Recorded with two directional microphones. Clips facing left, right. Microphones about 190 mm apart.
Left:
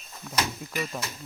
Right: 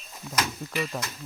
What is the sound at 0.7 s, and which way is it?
Speech, 45° left (ahead or behind).